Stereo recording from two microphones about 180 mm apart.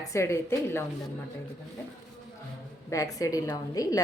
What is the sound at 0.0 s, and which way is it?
Speech, 15° left (ahead or behind).